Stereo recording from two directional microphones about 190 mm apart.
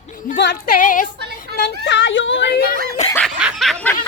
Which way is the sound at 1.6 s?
65° left (ahead or behind).